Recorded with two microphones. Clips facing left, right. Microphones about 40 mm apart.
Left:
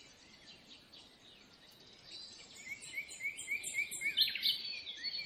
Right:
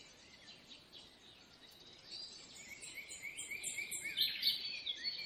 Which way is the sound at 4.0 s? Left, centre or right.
Left.